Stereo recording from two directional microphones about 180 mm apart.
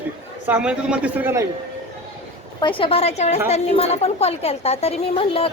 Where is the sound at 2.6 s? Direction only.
30° left (ahead or behind).